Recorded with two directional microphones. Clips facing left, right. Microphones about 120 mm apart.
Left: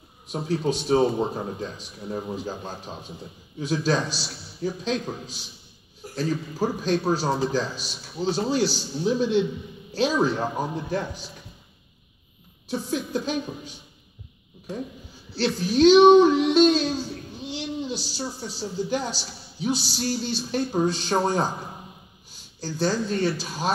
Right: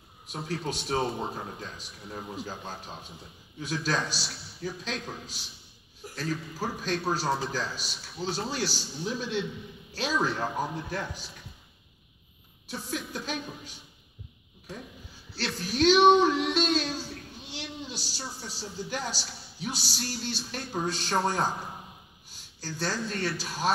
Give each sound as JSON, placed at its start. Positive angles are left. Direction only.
{"t": 0.3, "sound": "a man's voice", "side_deg": 20}
{"t": 12.6, "sound": "a man's voice", "side_deg": 25}
{"t": 15.3, "sound": "a man's voice", "side_deg": 20}
{"t": 17.5, "sound": "a sound", "side_deg": 25}
{"t": 18.4, "sound": "a man's voice", "side_deg": 20}
{"t": 22.8, "sound": "speech", "side_deg": 15}